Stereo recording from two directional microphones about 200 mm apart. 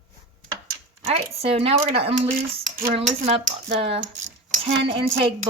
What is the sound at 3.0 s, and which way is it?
Speech, 30° right (ahead or behind).